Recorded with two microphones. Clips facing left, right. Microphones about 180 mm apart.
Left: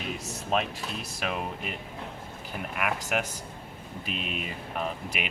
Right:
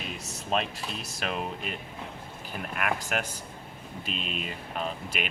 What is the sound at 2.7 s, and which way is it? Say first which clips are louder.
Speech: left 1 dB; 15° left (ahead or behind).